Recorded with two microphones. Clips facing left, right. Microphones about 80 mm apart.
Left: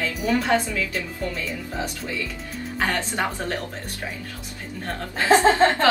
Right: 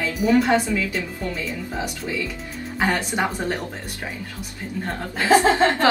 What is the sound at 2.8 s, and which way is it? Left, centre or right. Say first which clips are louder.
Speech: right 3 dB; centre.